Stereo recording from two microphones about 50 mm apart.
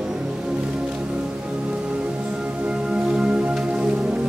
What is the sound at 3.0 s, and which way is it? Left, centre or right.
Music, centre.